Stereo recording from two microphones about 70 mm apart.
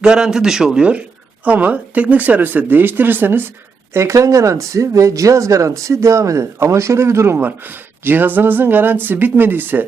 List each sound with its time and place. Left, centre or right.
0.0 s a man's voice: centre; by 3.5 s right
3.9 s speech: right
7.3 s speech: right